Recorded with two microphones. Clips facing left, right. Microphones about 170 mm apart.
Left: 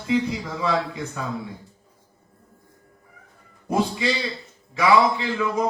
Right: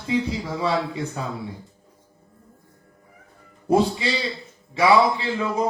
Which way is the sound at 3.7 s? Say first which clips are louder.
Right 3 dB; 30° right (ahead or behind).